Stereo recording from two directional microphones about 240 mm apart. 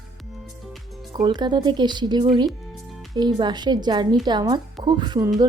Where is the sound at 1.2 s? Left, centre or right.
Centre.